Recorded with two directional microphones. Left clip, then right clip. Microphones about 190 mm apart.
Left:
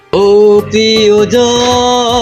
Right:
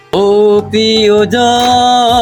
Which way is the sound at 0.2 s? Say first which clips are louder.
Left 2 dB; 25° right (ahead or behind).